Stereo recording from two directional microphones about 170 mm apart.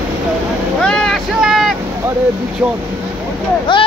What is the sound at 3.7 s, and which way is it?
Speech, 30° left (ahead or behind).